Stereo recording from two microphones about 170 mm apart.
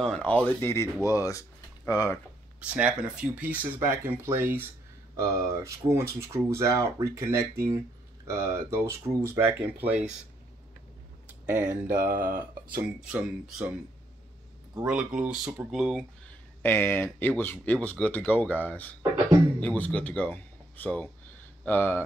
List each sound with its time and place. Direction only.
0.0 s speech: 5° left (ahead or behind)
2.6 s speech: 10° right (ahead or behind)
11.4 s speech: 15° right (ahead or behind)
11.9 s speech: 55° right (ahead or behind)
13.0 s speech: 5° right (ahead or behind)
14.9 s speech: 5° right (ahead or behind)
16.6 s speech: 15° left (ahead or behind)